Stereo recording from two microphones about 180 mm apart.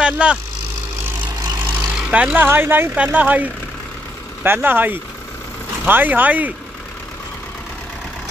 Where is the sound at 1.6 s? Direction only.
5° right (ahead or behind).